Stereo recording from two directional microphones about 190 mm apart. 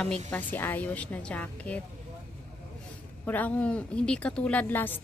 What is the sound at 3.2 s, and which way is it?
A woman's voice, 10° left (ahead or behind).